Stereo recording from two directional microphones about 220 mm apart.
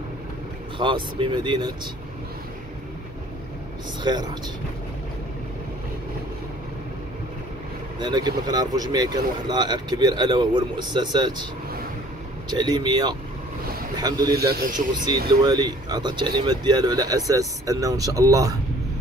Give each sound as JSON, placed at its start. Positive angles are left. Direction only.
{"t": 0.7, "sound": "speech", "side_deg": -20}
{"t": 4.0, "sound": "speech", "side_deg": -20}
{"t": 8.0, "sound": "speech", "side_deg": -20}
{"t": 12.4, "sound": "a man's voice", "side_deg": -20}
{"t": 14.3, "sound": "a man's voice", "side_deg": -45}
{"t": 15.4, "sound": "a man's voice", "side_deg": -20}